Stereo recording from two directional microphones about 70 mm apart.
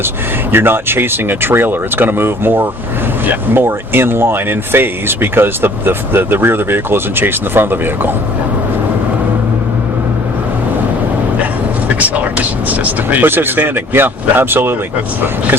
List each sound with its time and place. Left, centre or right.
0.5 s speech: right
11.9 s speech: right